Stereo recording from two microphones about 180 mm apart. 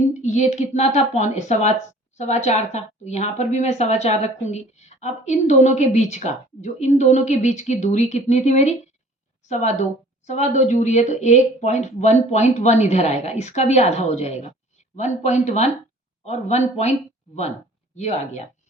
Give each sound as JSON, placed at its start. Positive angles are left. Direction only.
{"t": 0.1, "sound": "a woman's voice", "side_deg": 40}
{"t": 17.9, "sound": "a woman's voice", "side_deg": 40}